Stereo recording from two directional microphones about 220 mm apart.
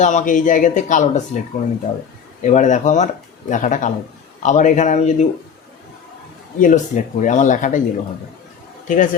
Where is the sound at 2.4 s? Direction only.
35° left (ahead or behind).